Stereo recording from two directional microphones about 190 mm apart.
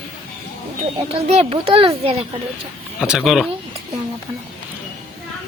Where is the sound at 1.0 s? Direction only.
35° right (ahead or behind).